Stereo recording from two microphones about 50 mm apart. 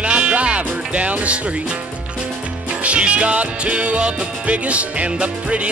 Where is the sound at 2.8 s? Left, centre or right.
Right.